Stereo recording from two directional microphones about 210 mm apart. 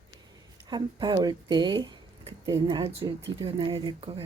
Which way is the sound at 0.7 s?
20° right (ahead or behind).